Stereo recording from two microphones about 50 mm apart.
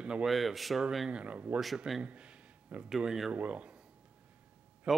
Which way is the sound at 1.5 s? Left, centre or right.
Right.